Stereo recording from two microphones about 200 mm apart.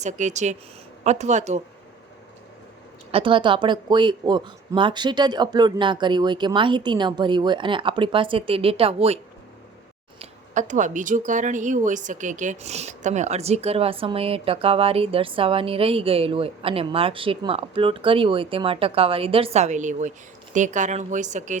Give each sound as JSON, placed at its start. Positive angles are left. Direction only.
{"t": 0.0, "sound": "speech", "side_deg": -35}
{"t": 3.1, "sound": "speech", "side_deg": -25}